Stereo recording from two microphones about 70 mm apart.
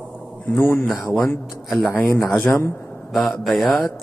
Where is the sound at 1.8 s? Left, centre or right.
Left.